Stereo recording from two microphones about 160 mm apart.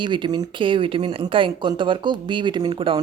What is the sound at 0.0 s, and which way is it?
Speech, 30° right (ahead or behind).